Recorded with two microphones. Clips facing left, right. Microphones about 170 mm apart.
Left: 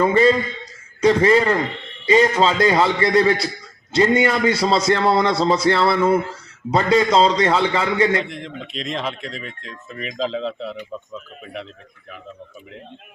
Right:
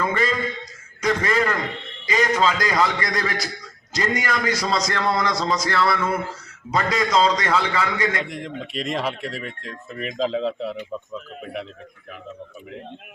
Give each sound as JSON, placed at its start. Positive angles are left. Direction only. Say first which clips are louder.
{"t": 0.0, "sound": "a man's voice", "louder": "left 8 dB", "side_deg": 30}
{"t": 8.2, "sound": "speech", "louder": "even", "side_deg": -10}